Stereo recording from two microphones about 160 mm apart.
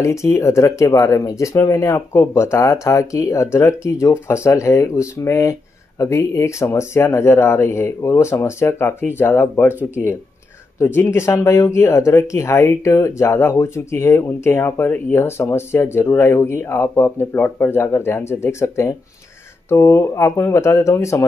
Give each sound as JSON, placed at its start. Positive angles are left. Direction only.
{"t": 0.0, "sound": "speech", "side_deg": 15}
{"t": 11.0, "sound": "speech", "side_deg": 15}